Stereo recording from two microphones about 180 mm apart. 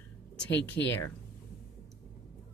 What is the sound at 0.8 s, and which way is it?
Speech, 80° left.